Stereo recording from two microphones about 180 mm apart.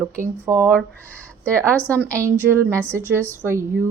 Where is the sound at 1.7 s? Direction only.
10° left (ahead or behind).